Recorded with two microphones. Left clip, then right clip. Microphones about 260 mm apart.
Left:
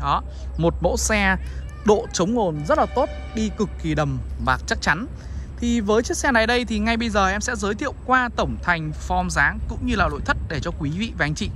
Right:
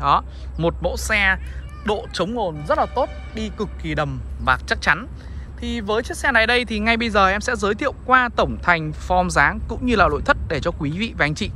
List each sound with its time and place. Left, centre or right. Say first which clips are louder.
0.0 s speech: right 5 dB; centre